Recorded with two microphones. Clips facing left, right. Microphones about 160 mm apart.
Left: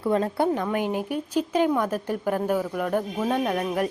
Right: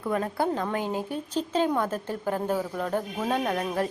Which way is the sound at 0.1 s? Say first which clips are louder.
Left 4 dB; 25° left (ahead or behind).